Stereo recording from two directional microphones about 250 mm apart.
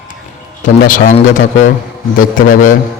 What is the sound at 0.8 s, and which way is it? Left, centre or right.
A man's voice, left.